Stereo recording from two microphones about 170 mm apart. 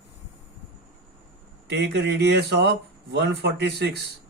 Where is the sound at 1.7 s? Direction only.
80° right.